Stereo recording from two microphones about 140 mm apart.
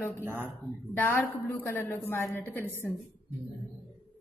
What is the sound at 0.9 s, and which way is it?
A woman's voice, 15° left (ahead or behind).